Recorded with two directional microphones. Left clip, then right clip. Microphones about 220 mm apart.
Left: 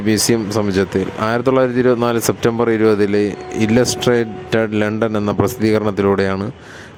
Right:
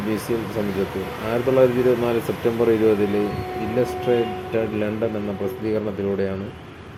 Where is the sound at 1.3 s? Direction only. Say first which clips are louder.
Left 1 dB; 45° left (ahead or behind).